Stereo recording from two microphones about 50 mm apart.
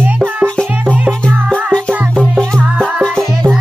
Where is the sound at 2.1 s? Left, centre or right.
Centre.